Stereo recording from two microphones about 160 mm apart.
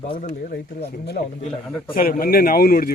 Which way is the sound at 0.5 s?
90° left.